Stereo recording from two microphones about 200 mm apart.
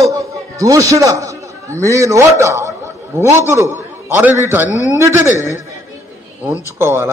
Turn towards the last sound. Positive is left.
turn(degrees=-10)  # may be behind; listen again after turning